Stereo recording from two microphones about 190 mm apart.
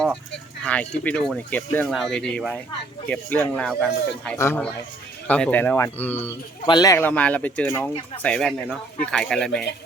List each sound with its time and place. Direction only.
0.6 s speech: 5° left (ahead or behind)